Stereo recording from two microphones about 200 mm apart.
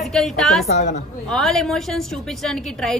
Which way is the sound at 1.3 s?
Centre (ahead or behind).